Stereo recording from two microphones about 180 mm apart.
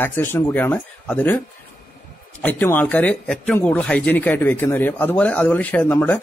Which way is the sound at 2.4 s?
10° left (ahead or behind).